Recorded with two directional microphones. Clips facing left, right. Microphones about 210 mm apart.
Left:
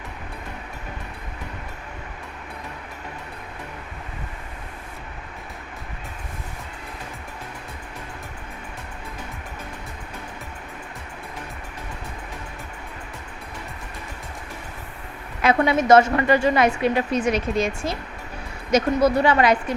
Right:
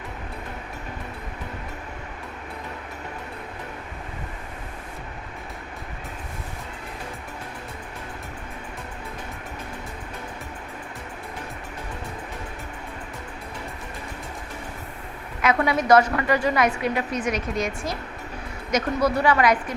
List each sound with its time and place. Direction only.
15.4 s a woman's voice: 25° left (ahead or behind)